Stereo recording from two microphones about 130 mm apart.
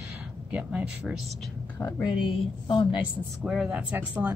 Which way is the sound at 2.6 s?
35° left (ahead or behind).